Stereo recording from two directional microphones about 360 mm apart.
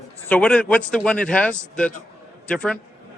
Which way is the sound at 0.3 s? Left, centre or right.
Centre.